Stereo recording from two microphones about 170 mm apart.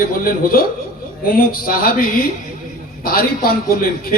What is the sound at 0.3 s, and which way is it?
A man's voice, 60° left (ahead or behind).